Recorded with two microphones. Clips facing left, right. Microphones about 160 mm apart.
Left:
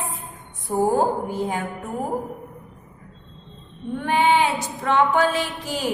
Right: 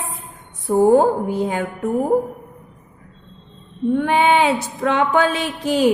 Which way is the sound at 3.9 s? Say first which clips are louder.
Right 3 dB; 75° right (ahead or behind).